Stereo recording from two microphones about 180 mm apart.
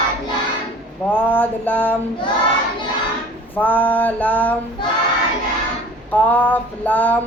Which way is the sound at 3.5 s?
10° left (ahead or behind).